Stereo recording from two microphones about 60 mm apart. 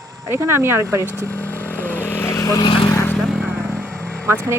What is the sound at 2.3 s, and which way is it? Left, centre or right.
Vehicle, left.